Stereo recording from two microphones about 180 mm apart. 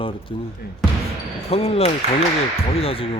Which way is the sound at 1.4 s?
35° left (ahead or behind).